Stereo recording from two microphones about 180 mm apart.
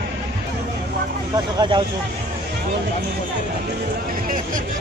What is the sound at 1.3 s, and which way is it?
Speech, 25° right (ahead or behind).